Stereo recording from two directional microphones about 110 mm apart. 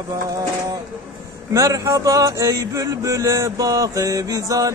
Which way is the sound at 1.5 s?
30° right (ahead or behind).